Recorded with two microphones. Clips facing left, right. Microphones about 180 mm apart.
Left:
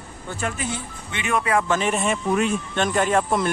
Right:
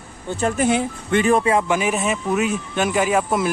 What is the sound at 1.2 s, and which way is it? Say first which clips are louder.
Speech: right 3 dB; 30° right (ahead or behind).